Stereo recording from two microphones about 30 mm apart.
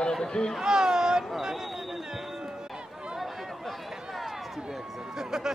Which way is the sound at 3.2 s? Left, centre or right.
Centre.